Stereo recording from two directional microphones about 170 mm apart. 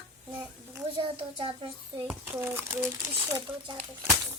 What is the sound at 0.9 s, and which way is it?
A child's voice, 30° right (ahead or behind).